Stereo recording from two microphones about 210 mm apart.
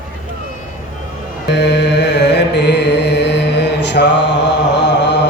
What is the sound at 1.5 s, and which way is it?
Mantra, 55° left (ahead or behind).